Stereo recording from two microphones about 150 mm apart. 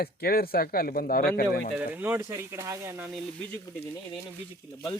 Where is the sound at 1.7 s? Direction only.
10° right (ahead or behind).